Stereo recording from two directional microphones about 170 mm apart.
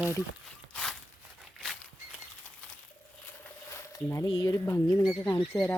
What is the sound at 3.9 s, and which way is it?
Speech, 15° left (ahead or behind).